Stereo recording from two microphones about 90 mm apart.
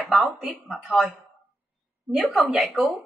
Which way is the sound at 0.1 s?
Centre (ahead or behind).